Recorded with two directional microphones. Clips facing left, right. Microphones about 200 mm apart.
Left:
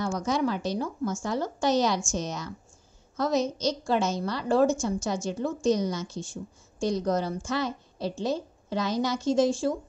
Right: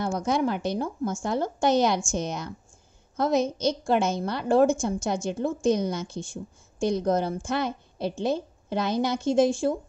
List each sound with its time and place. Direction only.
0.2 s a woman's voice: 55° right (ahead or behind)